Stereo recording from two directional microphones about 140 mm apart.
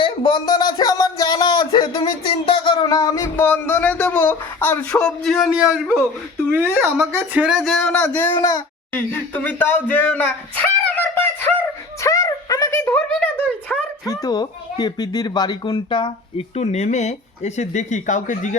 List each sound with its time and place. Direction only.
0.0 s speech: 30° left (ahead or behind)
3.3 s speech: 15° left (ahead or behind)
8.0 s speech: 15° left (ahead or behind)
8.3 s speech: 25° left (ahead or behind)
12.0 s a sound: 25° left (ahead or behind)
14.1 s speech: 30° left (ahead or behind)
16.6 s speech: 55° left (ahead or behind)